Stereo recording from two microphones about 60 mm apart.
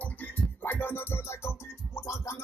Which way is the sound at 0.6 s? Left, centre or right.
Left.